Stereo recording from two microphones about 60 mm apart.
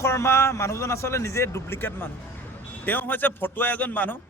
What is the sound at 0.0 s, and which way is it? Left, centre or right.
A man's voice, left.